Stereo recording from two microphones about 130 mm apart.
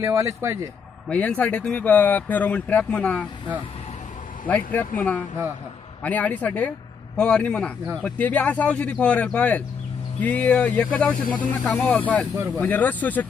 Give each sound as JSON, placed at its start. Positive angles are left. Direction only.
{"t": 0.0, "sound": "a man's voice", "side_deg": -25}
{"t": 1.0, "sound": "speech", "side_deg": 10}
{"t": 4.7, "sound": "speech", "side_deg": 10}